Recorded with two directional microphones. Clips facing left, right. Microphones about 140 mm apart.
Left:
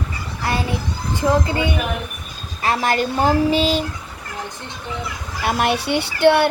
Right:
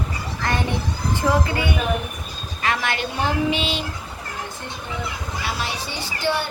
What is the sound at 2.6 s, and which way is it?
Speech, 35° left (ahead or behind).